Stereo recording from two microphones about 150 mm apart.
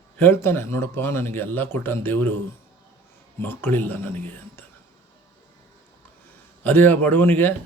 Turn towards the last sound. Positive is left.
turn(degrees=15)  # may be behind; listen again after turning